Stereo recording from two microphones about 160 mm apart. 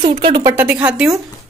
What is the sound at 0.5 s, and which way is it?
Speech, 10° right (ahead or behind).